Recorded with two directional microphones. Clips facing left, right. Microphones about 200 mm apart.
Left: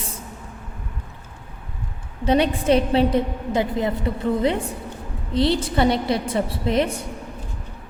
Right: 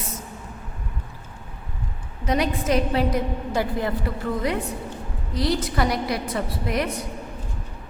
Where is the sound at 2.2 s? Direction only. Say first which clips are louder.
Left 5 dB; 30° left (ahead or behind).